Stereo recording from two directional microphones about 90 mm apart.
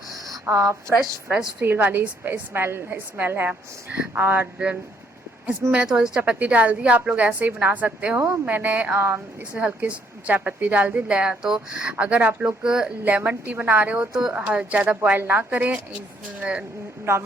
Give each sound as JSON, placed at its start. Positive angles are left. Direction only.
{"t": 0.5, "sound": "speech", "side_deg": -30}
{"t": 1.3, "sound": "a woman's voice", "side_deg": -10}
{"t": 1.6, "sound": "a woman's voice", "side_deg": -25}